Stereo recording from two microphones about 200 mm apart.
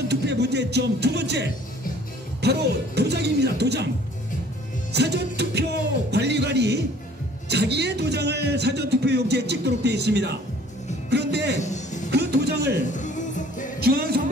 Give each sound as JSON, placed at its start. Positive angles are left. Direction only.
{"t": 0.1, "sound": "a man's voice", "side_deg": -55}
{"t": 4.9, "sound": "a man's voice", "side_deg": -55}
{"t": 11.1, "sound": "music", "side_deg": -55}
{"t": 11.5, "sound": "music", "side_deg": 35}
{"t": 12.1, "sound": "music", "side_deg": -55}
{"t": 12.9, "sound": "music", "side_deg": 40}
{"t": 13.7, "sound": "music", "side_deg": -50}